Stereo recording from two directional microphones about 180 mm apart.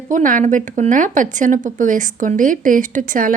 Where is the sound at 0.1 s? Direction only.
45° right (ahead or behind).